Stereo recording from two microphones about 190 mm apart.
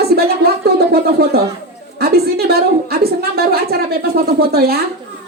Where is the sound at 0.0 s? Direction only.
55° right (ahead or behind).